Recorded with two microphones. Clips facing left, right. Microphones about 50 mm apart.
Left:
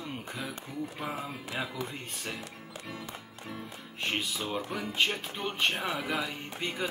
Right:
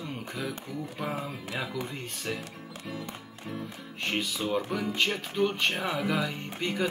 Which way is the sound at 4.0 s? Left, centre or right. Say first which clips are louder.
Right 2 dB; centre.